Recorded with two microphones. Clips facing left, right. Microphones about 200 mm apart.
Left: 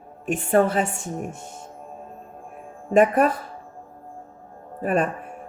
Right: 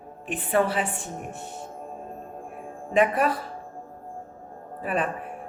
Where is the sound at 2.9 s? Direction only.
45° left (ahead or behind).